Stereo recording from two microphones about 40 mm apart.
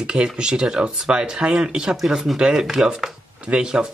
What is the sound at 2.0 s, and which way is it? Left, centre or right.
Speech, centre.